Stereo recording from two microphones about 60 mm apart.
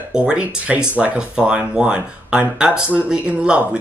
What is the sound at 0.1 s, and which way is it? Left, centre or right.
Speech, centre.